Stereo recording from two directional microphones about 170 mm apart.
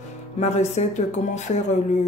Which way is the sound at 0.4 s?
40° left (ahead or behind).